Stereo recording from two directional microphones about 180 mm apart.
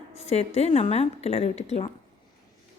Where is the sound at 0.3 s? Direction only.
35° left (ahead or behind).